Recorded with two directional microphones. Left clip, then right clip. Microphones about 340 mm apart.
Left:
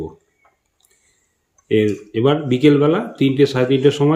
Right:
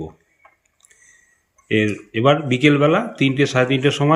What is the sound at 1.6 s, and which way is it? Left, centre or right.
Speech, centre.